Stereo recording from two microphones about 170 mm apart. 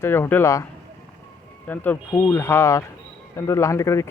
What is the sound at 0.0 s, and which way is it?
Speech, 15° left (ahead or behind).